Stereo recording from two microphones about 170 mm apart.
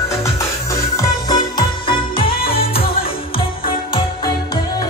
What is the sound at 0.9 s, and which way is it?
Music, 25° left (ahead or behind).